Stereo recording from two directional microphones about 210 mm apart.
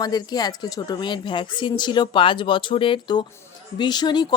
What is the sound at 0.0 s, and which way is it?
A woman's voice, 20° left (ahead or behind).